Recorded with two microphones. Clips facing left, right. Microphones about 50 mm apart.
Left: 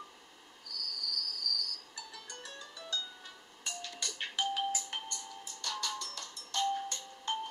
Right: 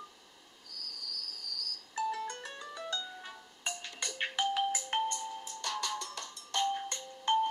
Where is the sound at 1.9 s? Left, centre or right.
Right.